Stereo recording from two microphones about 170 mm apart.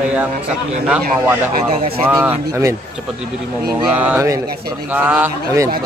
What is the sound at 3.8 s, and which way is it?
A man's voice, 10° right (ahead or behind).